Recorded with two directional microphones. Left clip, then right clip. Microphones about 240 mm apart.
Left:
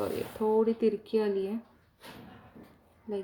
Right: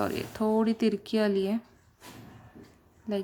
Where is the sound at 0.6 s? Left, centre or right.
Right.